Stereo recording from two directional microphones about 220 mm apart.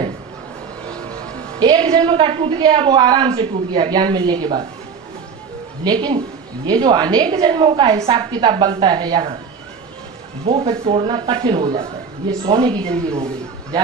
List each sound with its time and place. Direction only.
1.5 s a woman's voice: 20° right (ahead or behind)
5.8 s a woman's voice: 20° right (ahead or behind)
10.4 s a woman's voice: 25° right (ahead or behind)